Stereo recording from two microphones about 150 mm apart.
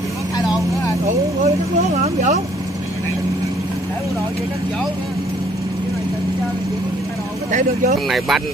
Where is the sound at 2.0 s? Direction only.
50° right (ahead or behind).